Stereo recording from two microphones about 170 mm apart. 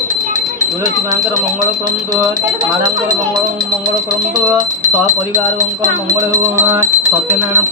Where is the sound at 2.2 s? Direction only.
20° right (ahead or behind).